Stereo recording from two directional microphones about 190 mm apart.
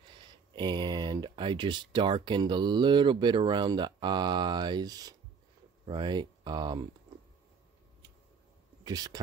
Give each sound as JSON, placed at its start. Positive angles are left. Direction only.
{"t": 0.1, "sound": "speech", "side_deg": -25}
{"t": 8.8, "sound": "speech", "side_deg": -20}